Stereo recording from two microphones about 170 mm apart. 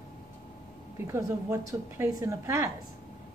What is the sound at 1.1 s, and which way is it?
Speech, 15° right (ahead or behind).